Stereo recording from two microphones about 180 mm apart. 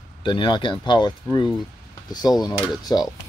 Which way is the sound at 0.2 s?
25° left (ahead or behind).